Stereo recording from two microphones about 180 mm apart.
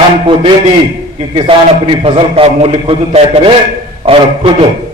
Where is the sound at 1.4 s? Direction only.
30° right (ahead or behind).